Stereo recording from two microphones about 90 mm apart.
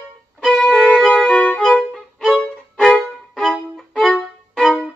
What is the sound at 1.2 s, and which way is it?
Violin, 15° left (ahead or behind).